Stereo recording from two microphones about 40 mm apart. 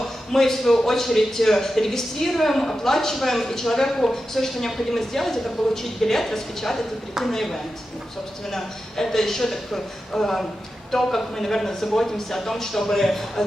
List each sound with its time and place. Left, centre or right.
0.3 s a woman's voice: centre